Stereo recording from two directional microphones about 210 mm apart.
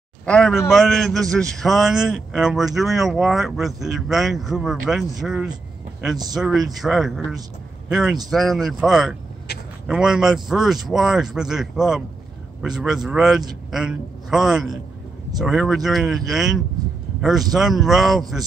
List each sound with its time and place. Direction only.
0.2 s a man's voice: 5° left (ahead or behind)
9.5 s speech: 50° left (ahead or behind)
9.8 s a man's voice: 5° right (ahead or behind)